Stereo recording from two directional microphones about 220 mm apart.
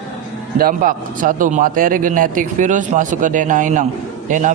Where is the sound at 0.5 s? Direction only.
40° right (ahead or behind).